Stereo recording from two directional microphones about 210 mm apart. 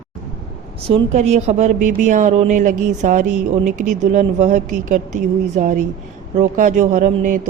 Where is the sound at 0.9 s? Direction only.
30° right (ahead or behind).